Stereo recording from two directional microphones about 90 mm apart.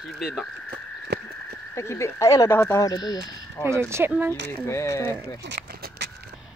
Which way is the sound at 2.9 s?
45° left (ahead or behind).